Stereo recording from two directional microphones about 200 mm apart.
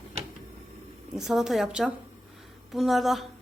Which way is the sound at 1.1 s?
Centre (ahead or behind).